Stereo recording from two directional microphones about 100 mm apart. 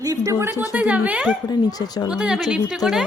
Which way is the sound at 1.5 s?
40° left (ahead or behind).